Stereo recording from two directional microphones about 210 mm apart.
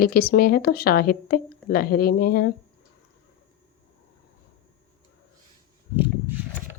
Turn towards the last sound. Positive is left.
turn(degrees=-10)  # may be behind; listen again after turning